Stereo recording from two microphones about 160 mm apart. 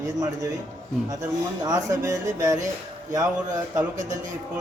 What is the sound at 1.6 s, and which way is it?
Speech, 20° right (ahead or behind).